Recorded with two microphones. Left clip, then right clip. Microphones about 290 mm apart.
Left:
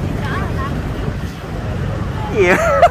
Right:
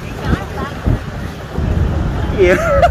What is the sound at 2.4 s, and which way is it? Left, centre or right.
Speech, centre.